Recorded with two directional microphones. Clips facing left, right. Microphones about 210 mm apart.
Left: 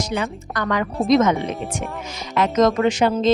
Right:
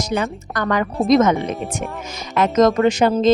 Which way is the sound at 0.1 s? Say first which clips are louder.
Right 3 dB; 45° right (ahead or behind).